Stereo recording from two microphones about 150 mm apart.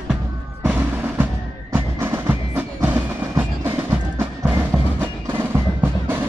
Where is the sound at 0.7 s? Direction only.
10° right (ahead or behind).